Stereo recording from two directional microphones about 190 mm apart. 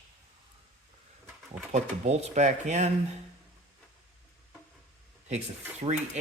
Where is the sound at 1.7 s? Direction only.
35° right (ahead or behind).